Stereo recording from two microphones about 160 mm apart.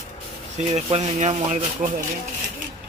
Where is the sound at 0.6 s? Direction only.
45° right (ahead or behind).